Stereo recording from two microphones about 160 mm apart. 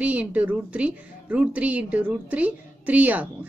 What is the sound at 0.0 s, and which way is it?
A woman's voice, 10° right (ahead or behind).